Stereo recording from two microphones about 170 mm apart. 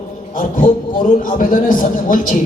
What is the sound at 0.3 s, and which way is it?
Music, 50° left (ahead or behind).